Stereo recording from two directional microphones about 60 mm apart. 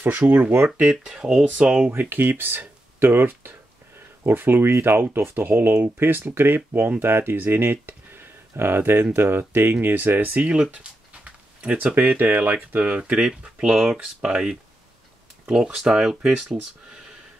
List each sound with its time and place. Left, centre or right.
0.3 s speech: right
0.7 s speech: centre
1.9 s speech: right
10.5 s a sound: centre
11.9 s speech: right
12.5 s speech: right
13.4 s speech: centre